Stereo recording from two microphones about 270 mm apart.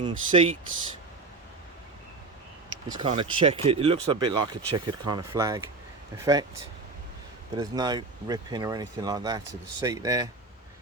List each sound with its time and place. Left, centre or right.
0.0 s speech: centre
2.9 s speech: centre
7.5 s speech: centre